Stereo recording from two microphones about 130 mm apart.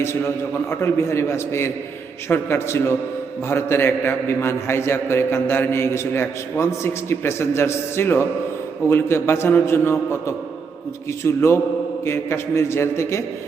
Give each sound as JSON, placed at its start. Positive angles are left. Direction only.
{"t": 0.0, "sound": "a man's voice", "side_deg": 20}